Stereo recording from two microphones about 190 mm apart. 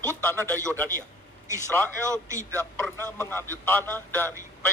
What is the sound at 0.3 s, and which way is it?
Speech, 10° left (ahead or behind).